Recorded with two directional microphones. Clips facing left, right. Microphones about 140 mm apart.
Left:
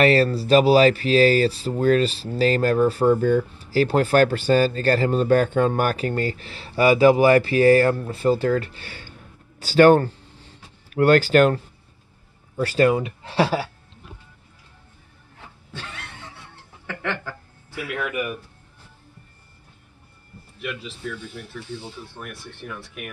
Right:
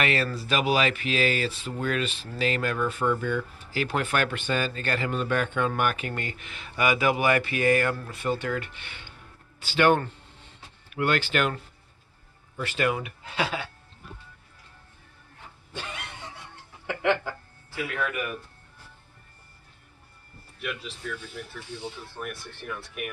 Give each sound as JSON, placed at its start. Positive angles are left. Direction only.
{"t": 0.0, "sound": "speech", "side_deg": 35}
{"t": 15.7, "sound": "a sound", "side_deg": -15}
{"t": 16.8, "sound": "speech", "side_deg": -15}
{"t": 17.9, "sound": "a man's voice", "side_deg": 10}
{"t": 20.6, "sound": "speech", "side_deg": 0}